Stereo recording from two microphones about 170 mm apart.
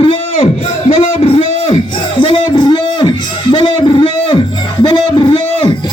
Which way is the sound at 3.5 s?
30° left (ahead or behind).